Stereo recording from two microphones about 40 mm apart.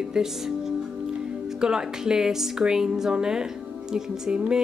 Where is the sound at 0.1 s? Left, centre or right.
Centre.